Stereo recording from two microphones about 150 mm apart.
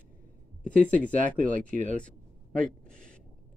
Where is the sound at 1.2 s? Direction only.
60° right (ahead or behind).